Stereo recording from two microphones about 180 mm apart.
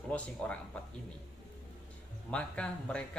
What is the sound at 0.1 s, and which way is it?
Speech, 5° left (ahead or behind).